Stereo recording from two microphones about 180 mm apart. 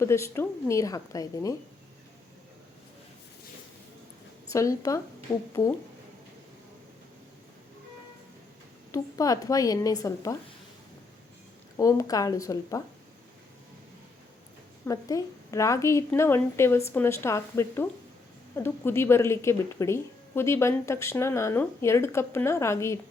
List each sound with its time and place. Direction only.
0.0 s speech: 15° left (ahead or behind)
4.5 s speech: 15° left (ahead or behind)
8.9 s a woman's voice: 20° left (ahead or behind)
11.8 s speech: 20° left (ahead or behind)
14.8 s speech: 20° left (ahead or behind)